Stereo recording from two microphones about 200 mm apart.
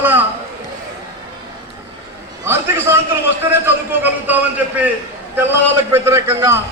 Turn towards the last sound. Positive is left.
turn(degrees=-15)  # may be behind; listen again after turning